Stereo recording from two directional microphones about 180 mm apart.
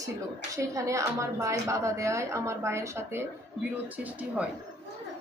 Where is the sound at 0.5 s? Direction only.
15° right (ahead or behind).